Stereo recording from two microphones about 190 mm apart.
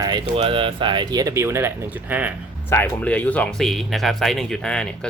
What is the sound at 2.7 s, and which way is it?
Speech, 10° left (ahead or behind).